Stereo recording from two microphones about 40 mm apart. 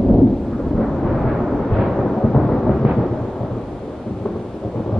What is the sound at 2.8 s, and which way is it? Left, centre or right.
Thunder, centre.